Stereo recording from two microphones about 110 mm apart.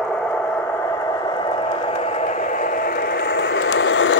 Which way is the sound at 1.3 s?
45° left (ahead or behind).